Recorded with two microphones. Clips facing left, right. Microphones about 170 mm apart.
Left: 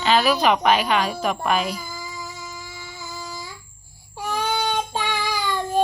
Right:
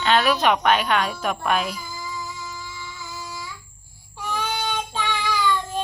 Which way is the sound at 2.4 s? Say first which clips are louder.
Right 1 dB; 50° left (ahead or behind).